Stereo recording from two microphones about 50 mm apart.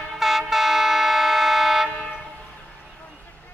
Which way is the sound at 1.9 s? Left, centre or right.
Left.